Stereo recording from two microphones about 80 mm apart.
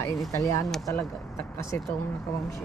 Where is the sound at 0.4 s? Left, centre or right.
Left.